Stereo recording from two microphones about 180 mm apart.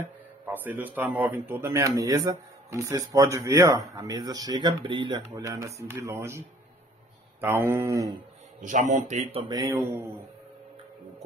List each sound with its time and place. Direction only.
0.0 s speech: 10° right (ahead or behind)
8.5 s a man's voice: 45° right (ahead or behind)
9.4 s speech: 20° right (ahead or behind)